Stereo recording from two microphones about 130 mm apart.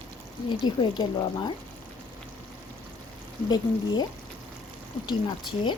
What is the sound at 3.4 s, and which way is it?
Speech, 35° left (ahead or behind).